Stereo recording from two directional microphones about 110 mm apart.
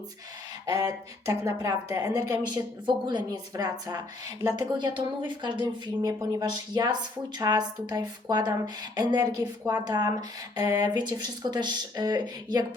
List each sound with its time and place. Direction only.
0.6 s speech: 35° right (ahead or behind)
2.5 s speech: 40° right (ahead or behind)